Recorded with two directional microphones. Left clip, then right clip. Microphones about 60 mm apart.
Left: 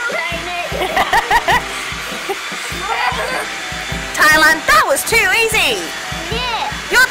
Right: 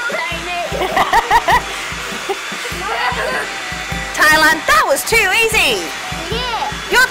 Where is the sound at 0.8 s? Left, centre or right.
Centre.